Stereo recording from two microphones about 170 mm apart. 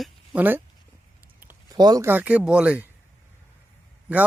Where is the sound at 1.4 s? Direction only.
10° right (ahead or behind).